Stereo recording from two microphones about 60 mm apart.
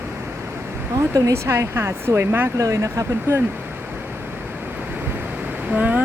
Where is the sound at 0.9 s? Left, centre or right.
Right.